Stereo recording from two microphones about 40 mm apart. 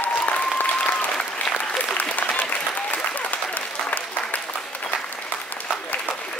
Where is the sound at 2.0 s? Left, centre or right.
Left.